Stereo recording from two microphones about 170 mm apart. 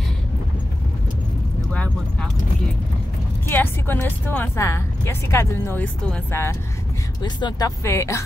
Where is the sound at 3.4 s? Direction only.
10° left (ahead or behind).